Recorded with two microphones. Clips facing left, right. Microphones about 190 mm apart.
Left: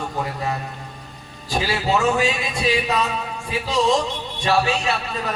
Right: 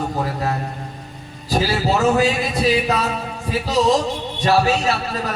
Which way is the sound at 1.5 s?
40° right (ahead or behind).